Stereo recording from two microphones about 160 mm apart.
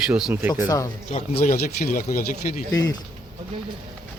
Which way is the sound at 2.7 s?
25° left (ahead or behind).